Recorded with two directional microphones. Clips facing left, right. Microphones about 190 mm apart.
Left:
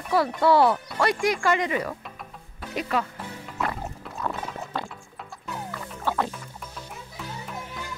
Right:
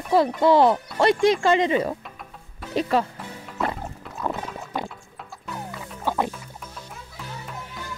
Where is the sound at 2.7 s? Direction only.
30° right (ahead or behind).